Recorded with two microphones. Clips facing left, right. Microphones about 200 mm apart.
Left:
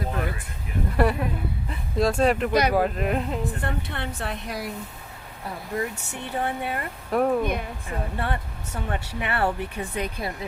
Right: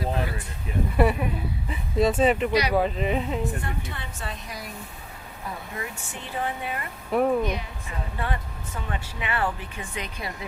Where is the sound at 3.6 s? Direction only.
65° left (ahead or behind).